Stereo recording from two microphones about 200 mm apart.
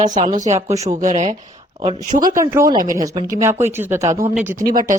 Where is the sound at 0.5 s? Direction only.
15° right (ahead or behind).